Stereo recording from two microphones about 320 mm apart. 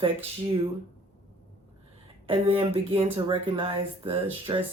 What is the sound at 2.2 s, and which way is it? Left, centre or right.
Speech, centre.